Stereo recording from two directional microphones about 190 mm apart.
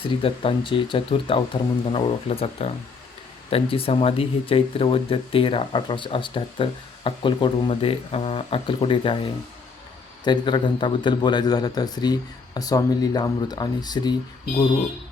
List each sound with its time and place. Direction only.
0.0 s speech: 30° left (ahead or behind)
10.2 s speech: 25° left (ahead or behind)